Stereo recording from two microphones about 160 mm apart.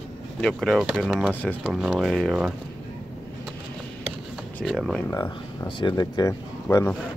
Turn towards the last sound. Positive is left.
turn(degrees=20)  # may be behind; listen again after turning